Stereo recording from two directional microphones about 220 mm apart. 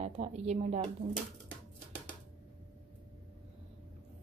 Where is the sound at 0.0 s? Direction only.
30° right (ahead or behind).